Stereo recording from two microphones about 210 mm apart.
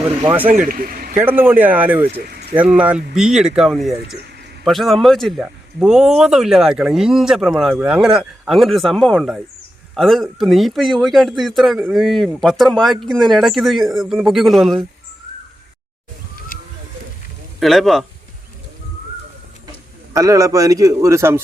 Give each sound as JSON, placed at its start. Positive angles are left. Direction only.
{"t": 0.2, "sound": "a man's voice", "side_deg": -10}
{"t": 0.7, "sound": "speech", "side_deg": -45}
{"t": 1.1, "sound": "a man's voice", "side_deg": -10}
{"t": 17.6, "sound": "speech", "side_deg": 0}
{"t": 20.1, "sound": "a man's voice", "side_deg": -15}